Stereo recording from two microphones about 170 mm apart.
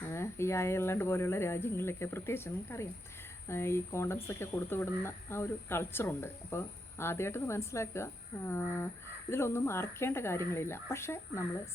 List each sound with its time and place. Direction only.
0.1 s speech: 15° left (ahead or behind)